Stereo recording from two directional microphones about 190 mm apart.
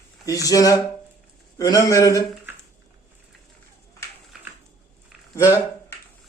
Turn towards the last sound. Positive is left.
turn(degrees=15)  # may be behind; listen again after turning